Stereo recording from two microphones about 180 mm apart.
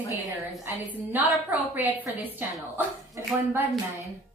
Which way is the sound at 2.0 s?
10° left (ahead or behind).